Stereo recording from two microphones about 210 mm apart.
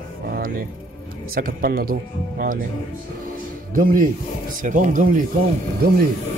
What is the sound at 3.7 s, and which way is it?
Speech, 40° right (ahead or behind).